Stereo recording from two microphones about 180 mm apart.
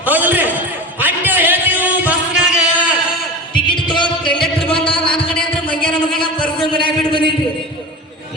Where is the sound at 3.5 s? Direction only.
25° left (ahead or behind).